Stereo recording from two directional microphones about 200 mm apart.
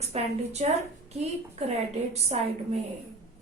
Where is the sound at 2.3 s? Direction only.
35° right (ahead or behind).